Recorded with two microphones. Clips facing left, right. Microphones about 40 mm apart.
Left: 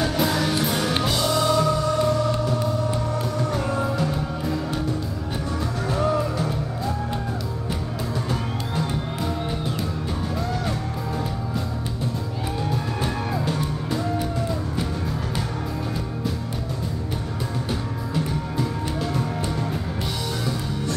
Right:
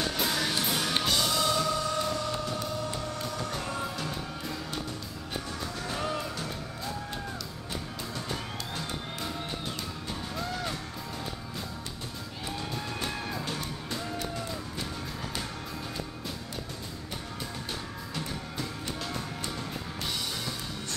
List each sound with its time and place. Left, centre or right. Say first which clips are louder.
0.0 s music: left 7 dB; centre
8.3 s music: left 8 dB; centre
13.0 s music: left 8 dB; centre
18.1 s music: left 10 dB; centre